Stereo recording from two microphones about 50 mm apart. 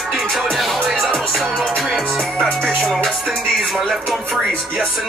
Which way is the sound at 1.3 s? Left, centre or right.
Centre.